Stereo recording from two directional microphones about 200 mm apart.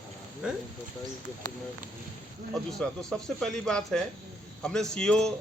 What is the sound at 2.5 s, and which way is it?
A man's voice, centre (ahead or behind).